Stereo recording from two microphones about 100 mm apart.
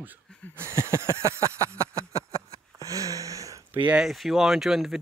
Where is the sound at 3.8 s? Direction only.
10° right (ahead or behind).